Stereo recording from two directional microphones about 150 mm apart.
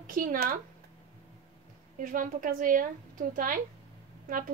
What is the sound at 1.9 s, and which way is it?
A woman's voice, 65° right (ahead or behind).